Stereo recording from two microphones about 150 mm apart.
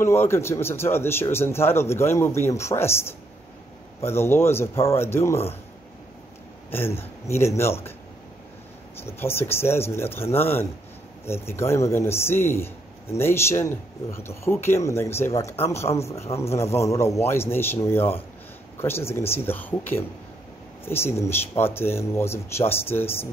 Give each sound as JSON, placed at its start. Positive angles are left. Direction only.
{"t": 0.0, "sound": "a man's voice", "side_deg": 15}
{"t": 6.7, "sound": "a man's voice", "side_deg": 15}
{"t": 9.0, "sound": "a man's voice", "side_deg": 15}